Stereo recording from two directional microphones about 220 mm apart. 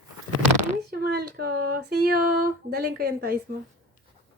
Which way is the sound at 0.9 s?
45° right (ahead or behind).